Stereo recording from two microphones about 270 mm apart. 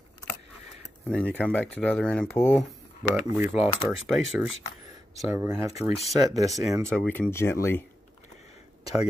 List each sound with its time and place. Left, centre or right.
1.0 s speech: centre
3.0 s speech: centre
5.8 s speech: left
6.1 s speech: centre
6.7 s speech: centre